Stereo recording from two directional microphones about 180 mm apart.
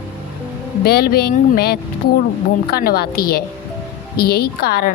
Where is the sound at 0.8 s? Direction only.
60° left (ahead or behind).